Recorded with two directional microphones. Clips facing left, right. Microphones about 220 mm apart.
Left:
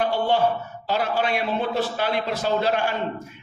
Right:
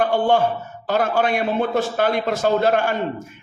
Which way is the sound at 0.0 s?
50° right (ahead or behind).